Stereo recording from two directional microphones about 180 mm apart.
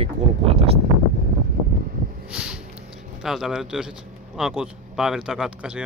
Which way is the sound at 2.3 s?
5° right (ahead or behind).